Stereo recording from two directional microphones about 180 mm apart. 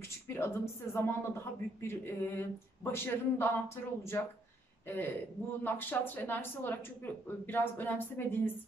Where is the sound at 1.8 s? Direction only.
15° left (ahead or behind).